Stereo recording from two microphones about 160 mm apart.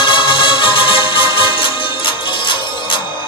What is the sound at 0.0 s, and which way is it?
Music, 30° left (ahead or behind).